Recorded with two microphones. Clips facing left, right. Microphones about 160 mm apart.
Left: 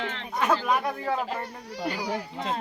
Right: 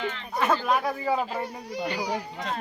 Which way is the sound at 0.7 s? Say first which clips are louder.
Right 1 dB; 5° right (ahead or behind).